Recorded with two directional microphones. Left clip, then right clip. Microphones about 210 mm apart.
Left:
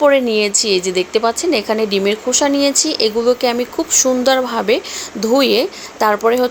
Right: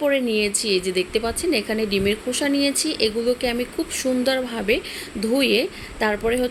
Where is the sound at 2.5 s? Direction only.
35° left (ahead or behind).